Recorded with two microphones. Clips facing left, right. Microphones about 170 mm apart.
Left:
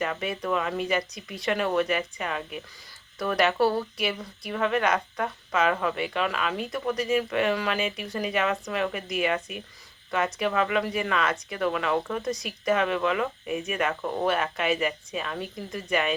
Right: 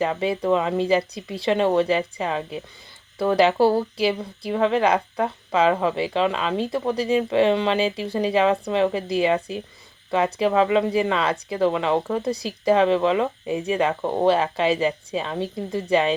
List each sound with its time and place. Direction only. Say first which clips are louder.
0.0 s speech: right 7 dB; 25° right (ahead or behind)